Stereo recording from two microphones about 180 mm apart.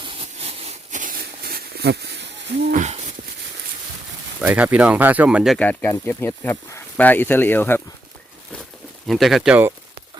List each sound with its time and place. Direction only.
0.0 s a sound: 30° right (ahead or behind); by 2.2 s 70° right (ahead or behind)
2.7 s hoot: 40° right (ahead or behind)
4.4 s speech: 10° right (ahead or behind)
5.5 s speech: 10° left (ahead or behind)
9.0 s speech: centre (ahead or behind)